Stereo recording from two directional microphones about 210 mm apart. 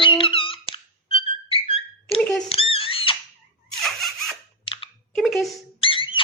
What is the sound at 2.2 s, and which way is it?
Speech, centre (ahead or behind).